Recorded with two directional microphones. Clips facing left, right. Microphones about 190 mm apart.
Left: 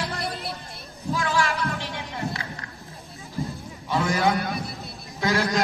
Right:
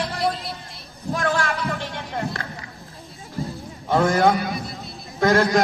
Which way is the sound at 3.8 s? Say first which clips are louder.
Right 5 dB; 55° right (ahead or behind).